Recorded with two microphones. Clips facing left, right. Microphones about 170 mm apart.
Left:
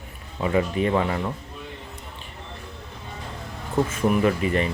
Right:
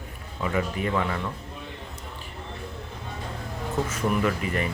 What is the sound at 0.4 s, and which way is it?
Speech, 30° left (ahead or behind).